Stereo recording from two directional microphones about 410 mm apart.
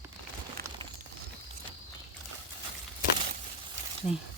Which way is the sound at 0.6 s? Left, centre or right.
Right.